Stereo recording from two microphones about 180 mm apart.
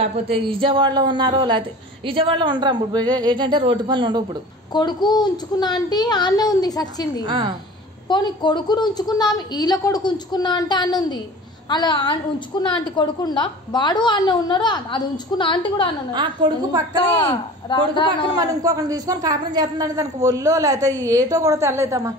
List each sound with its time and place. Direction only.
0.1 s a man's voice: 30° right (ahead or behind)
4.7 s a woman's voice: 25° left (ahead or behind)
7.2 s a man's voice: 25° right (ahead or behind)
8.1 s a woman's voice: 25° left (ahead or behind)
16.1 s a man's voice: 25° right (ahead or behind)
17.2 s a woman's voice: 25° left (ahead or behind)
18.3 s a man's voice: 20° right (ahead or behind)